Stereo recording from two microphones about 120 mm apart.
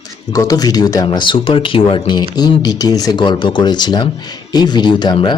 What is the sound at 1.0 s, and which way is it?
Speech, 40° left (ahead or behind).